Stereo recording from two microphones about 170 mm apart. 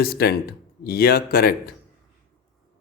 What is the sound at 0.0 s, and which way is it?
Speech, 65° left (ahead or behind).